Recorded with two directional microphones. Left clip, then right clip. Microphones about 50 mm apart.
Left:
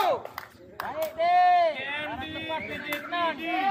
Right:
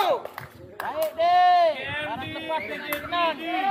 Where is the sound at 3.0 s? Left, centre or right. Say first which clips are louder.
Right 4 dB; right.